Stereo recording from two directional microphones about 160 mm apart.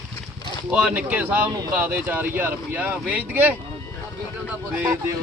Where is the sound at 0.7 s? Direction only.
5° right (ahead or behind).